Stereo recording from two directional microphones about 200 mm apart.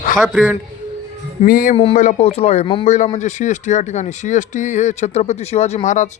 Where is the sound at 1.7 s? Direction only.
30° left (ahead or behind).